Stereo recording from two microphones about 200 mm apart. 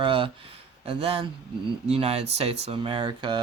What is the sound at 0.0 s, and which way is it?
Speech, 25° right (ahead or behind).